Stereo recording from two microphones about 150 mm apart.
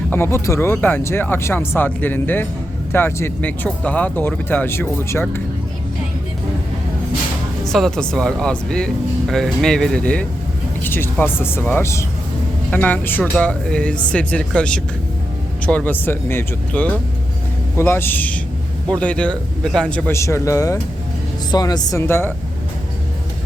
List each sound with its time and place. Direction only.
0.1 s speech: 15° left (ahead or behind)
7.7 s a man's voice: 5° left (ahead or behind)